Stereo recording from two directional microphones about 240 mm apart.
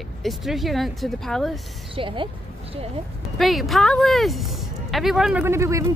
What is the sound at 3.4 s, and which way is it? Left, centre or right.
Speech, centre.